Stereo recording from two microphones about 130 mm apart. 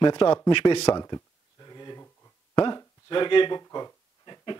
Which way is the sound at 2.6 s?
35° left (ahead or behind).